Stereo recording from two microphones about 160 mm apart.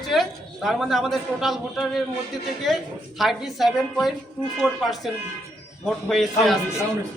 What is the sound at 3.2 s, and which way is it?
Speech, centre (ahead or behind).